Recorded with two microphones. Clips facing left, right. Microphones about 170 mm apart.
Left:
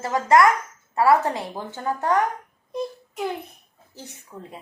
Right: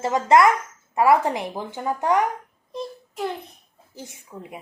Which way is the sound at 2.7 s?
5° left (ahead or behind).